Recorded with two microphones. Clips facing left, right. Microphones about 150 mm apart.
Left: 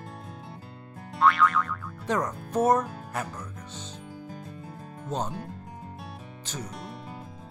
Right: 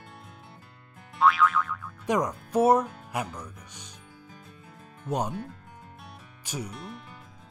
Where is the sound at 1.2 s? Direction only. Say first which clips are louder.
Even; centre (ahead or behind).